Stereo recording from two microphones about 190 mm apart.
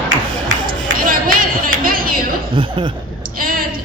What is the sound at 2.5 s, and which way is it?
Speech, 25° right (ahead or behind).